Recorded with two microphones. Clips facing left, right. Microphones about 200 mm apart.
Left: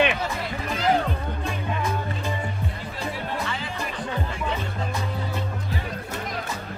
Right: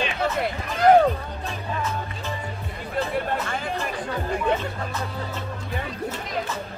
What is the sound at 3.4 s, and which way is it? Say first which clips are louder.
Music: right 2 dB; 50° right (ahead or behind).